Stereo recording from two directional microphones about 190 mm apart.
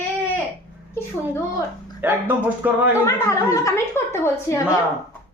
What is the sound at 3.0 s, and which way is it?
A woman's voice, 15° left (ahead or behind).